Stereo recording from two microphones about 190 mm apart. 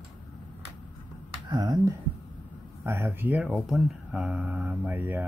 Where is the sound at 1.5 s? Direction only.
20° right (ahead or behind).